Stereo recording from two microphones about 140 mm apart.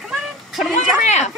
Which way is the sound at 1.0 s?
55° left (ahead or behind).